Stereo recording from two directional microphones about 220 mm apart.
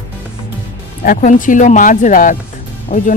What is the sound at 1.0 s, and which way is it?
Speech, 40° left (ahead or behind).